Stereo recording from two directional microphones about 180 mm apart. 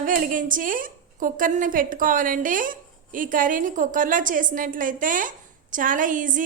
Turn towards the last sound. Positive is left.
turn(degrees=-45)  # may be behind; listen again after turning